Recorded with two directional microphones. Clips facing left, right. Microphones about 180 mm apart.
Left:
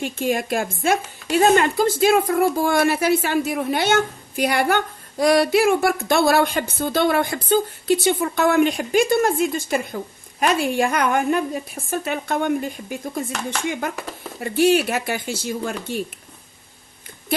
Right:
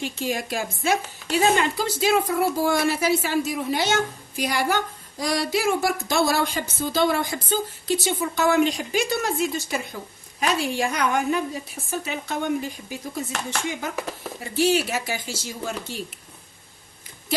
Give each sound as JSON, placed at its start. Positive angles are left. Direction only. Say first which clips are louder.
{"t": 0.0, "sound": "speech", "louder": "left 5 dB", "side_deg": 55}
{"t": 14.4, "sound": "speech", "louder": "left 5 dB", "side_deg": 60}